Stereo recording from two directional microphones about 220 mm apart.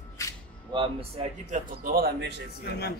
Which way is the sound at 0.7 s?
25° right (ahead or behind).